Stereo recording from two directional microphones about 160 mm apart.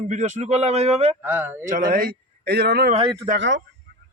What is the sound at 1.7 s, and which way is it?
A man's voice, 60° right (ahead or behind).